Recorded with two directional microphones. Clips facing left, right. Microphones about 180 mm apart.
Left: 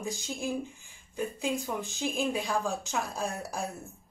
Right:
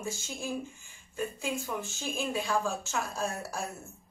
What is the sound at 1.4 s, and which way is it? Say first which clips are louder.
A woman's voice: left 2 dB; 15° left (ahead or behind).